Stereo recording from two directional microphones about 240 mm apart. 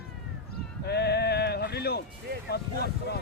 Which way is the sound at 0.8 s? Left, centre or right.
Left.